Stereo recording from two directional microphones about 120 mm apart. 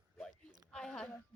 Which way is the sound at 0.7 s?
5° left (ahead or behind).